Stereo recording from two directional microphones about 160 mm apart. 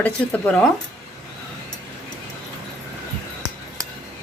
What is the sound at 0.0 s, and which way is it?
Speech, 10° left (ahead or behind).